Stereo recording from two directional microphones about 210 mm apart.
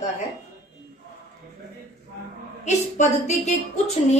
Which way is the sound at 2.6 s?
35° left (ahead or behind).